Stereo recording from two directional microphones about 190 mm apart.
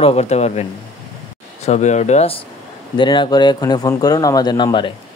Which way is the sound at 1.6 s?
40° left (ahead or behind).